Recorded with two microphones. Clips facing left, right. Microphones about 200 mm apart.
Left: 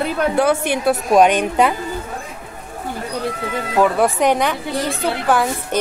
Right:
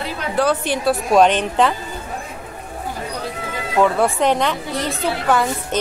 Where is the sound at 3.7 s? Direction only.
5° left (ahead or behind).